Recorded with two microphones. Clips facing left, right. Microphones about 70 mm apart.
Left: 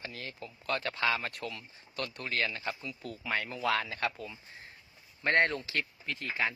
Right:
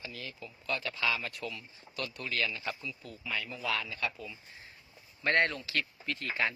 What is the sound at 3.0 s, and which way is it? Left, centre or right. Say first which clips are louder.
Speech: left 5 dB; left.